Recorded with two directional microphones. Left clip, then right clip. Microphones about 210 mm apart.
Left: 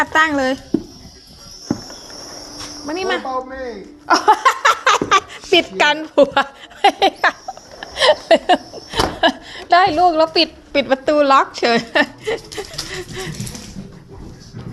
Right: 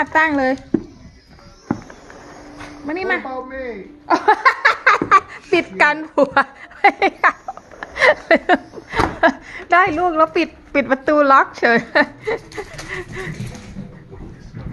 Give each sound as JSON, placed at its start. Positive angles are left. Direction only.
{"t": 0.0, "sound": "speech", "side_deg": -25}
{"t": 2.8, "sound": "a woman's voice", "side_deg": -10}
{"t": 4.1, "sound": "a sound", "side_deg": -5}
{"t": 5.1, "sound": "a woman's voice", "side_deg": 5}
{"t": 7.8, "sound": "chuckle", "side_deg": -20}
{"t": 9.6, "sound": "a sound", "side_deg": -10}
{"t": 9.9, "sound": "a woman's voice", "side_deg": -5}